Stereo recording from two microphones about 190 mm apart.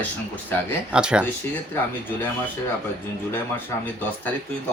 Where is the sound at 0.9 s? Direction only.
5° right (ahead or behind).